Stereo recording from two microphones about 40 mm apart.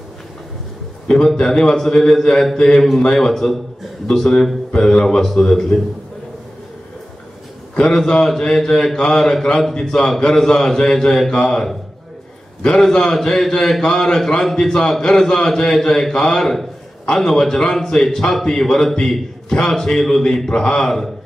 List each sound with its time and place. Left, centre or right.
1.0 s a man's voice: centre
7.7 s a man's voice: left
12.9 s a man's voice: centre
20.8 s a man's voice: centre